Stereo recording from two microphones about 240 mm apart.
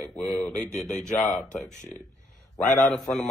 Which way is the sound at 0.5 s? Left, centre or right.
Left.